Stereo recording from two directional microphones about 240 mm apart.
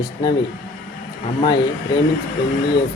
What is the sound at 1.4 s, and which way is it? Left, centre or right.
Speech, centre.